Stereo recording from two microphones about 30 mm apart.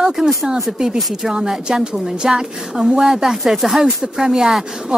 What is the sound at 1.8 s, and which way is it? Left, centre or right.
Speech, right.